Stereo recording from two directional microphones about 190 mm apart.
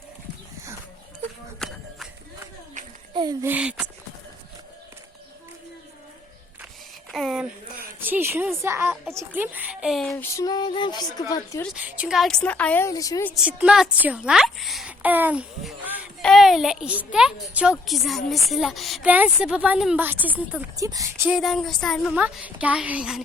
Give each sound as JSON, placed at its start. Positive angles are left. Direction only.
{"t": 1.5, "sound": "a sound", "side_deg": 0}
{"t": 3.1, "sound": "a sound", "side_deg": -25}
{"t": 3.4, "sound": "a woman's voice", "side_deg": -10}
{"t": 7.1, "sound": "a sound", "side_deg": 0}
{"t": 8.0, "sound": "a woman's voice", "side_deg": -10}
{"t": 10.3, "sound": "speech", "side_deg": 20}
{"t": 11.7, "sound": "a woman's voice", "side_deg": -5}
{"t": 13.3, "sound": "a child's voice", "side_deg": -5}
{"t": 21.3, "sound": "a child's voice", "side_deg": 0}